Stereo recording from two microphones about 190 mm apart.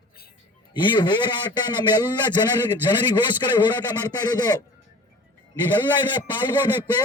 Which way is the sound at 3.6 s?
20° left (ahead or behind).